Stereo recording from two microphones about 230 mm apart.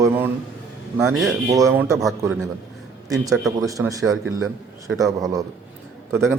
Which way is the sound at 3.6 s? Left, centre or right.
Centre.